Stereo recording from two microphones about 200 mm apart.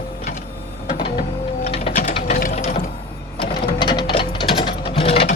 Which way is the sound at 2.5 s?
35° left (ahead or behind).